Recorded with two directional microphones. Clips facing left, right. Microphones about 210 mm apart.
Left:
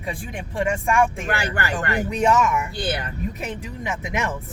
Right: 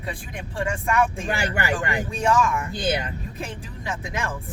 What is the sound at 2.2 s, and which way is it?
Speech, 25° left (ahead or behind).